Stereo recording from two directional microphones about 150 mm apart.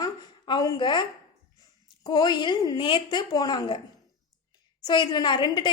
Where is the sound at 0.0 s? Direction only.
30° left (ahead or behind).